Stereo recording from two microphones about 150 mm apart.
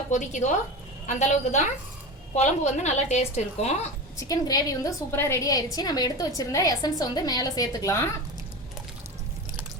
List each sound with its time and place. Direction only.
0.1 s a woman's voice: 55° left (ahead or behind)
4.2 s a woman's voice: 25° left (ahead or behind)